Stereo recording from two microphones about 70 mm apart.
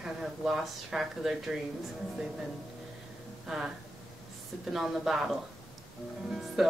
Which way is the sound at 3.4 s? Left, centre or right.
Centre.